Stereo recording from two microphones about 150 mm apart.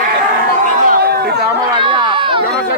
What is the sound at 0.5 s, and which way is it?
Chatter, 80° right.